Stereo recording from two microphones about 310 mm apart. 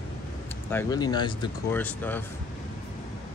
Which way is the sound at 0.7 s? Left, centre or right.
Centre.